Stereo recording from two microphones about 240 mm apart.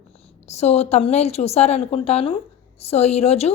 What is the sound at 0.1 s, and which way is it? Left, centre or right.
A woman's voice, left.